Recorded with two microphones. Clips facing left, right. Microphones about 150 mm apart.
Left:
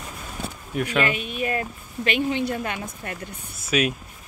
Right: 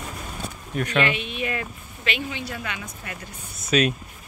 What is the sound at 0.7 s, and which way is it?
Speech, 10° left (ahead or behind).